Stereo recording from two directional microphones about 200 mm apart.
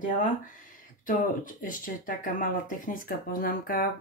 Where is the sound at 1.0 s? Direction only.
40° left (ahead or behind).